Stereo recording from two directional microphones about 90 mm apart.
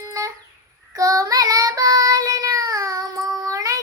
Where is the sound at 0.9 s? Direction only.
40° right (ahead or behind).